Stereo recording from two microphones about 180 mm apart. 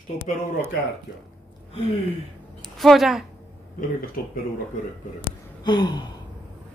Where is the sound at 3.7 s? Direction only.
55° left (ahead or behind).